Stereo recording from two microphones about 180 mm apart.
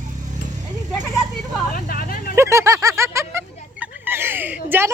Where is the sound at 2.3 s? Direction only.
15° right (ahead or behind).